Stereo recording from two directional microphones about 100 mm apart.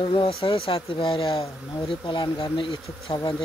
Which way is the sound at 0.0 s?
60° left (ahead or behind).